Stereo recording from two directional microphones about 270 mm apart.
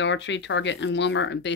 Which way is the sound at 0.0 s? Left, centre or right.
Left.